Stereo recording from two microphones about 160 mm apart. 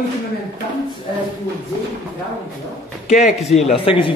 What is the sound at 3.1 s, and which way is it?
Speech, 50° left (ahead or behind).